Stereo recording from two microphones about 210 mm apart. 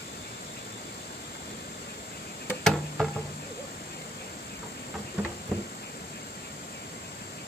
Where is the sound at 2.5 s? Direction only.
5° left (ahead or behind).